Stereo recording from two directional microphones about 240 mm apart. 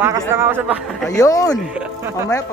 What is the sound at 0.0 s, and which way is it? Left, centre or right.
Speech, centre.